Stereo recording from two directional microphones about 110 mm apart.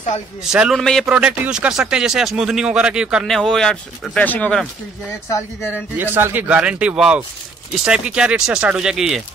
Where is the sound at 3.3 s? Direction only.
5° left (ahead or behind).